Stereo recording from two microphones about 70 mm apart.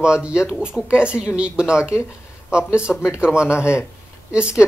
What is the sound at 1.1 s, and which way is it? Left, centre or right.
Speech, left.